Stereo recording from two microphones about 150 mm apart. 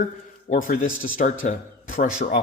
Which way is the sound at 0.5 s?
65° left (ahead or behind).